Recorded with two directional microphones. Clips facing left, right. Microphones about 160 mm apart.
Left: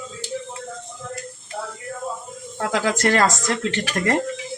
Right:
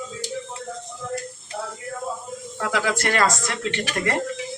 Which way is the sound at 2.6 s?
40° left (ahead or behind).